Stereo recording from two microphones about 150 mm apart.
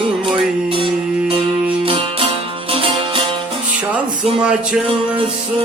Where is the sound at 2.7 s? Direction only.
40° right (ahead or behind).